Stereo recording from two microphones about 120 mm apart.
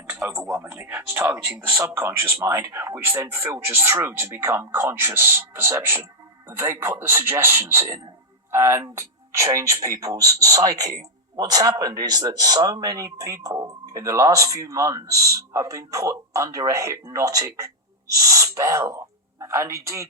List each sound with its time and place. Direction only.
0.3 s a man's voice: 25° right (ahead or behind)